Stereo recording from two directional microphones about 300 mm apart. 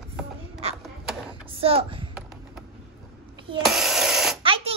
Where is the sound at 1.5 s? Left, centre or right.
Centre.